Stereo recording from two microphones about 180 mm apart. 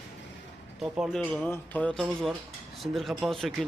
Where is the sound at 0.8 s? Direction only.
Centre (ahead or behind).